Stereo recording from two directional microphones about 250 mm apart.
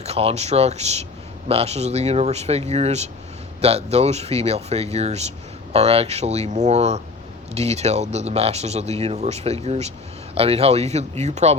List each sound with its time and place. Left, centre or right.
0.0 s speech: right